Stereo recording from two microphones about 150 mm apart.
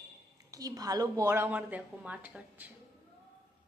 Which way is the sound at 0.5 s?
25° right (ahead or behind).